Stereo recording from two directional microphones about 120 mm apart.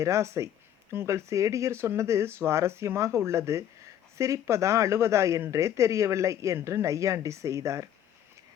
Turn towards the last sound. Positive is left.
turn(degrees=-25)  # may be behind; listen again after turning